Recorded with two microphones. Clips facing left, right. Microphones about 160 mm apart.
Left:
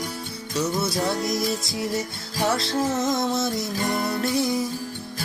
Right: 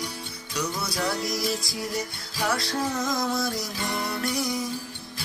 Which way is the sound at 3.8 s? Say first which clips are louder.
Left 5 dB; 50° left (ahead or behind).